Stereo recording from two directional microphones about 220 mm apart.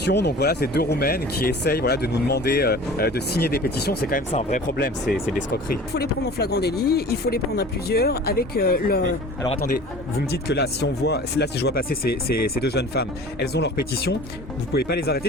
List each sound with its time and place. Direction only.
0.0 s speech: 50° left (ahead or behind)
4.3 s speech: 30° left (ahead or behind)
4.8 s speech: 45° left (ahead or behind)